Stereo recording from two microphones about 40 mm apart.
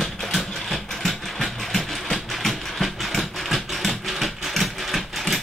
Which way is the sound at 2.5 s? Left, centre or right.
Centre.